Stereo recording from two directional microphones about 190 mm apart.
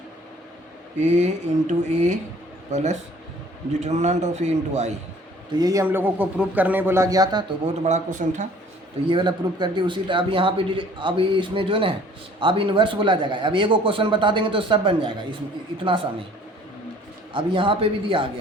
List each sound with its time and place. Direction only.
0.9 s speech: 35° right (ahead or behind)
5.5 s a man's voice: 20° right (ahead or behind)
7.6 s speech: 40° right (ahead or behind)
9.0 s a man's voice: 25° right (ahead or behind)
17.3 s a man's voice: 25° right (ahead or behind)